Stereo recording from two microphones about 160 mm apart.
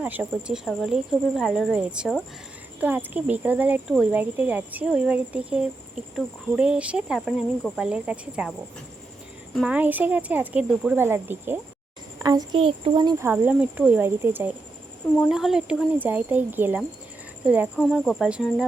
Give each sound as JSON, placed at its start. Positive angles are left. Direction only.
{"t": 0.0, "sound": "speech", "side_deg": -10}
{"t": 9.6, "sound": "speech", "side_deg": -10}
{"t": 12.2, "sound": "a child's voice", "side_deg": -25}
{"t": 13.2, "sound": "speech", "side_deg": -10}
{"t": 15.3, "sound": "speech", "side_deg": -5}